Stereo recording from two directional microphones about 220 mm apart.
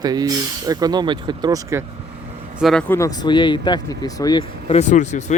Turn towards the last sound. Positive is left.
turn(degrees=35)  # may be behind; listen again after turning